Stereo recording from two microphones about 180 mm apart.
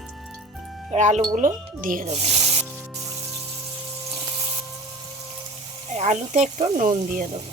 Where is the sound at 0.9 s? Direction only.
40° right (ahead or behind).